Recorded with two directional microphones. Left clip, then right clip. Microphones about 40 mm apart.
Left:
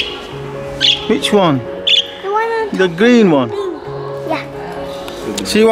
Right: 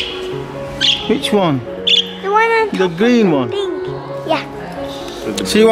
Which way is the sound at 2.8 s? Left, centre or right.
Centre.